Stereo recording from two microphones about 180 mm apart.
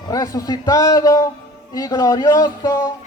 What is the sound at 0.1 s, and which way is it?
A man's voice, 20° left (ahead or behind).